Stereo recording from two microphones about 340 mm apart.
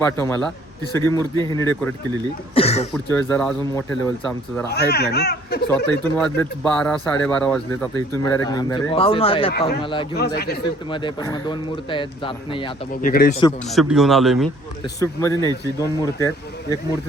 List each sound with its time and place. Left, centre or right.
0.0 s speech: centre
2.9 s speech: centre
4.7 s speech: left
6.1 s speech: centre
9.5 s speech: left
9.8 s speech: centre
10.2 s speech: left
10.6 s speech: centre
13.7 s speech: centre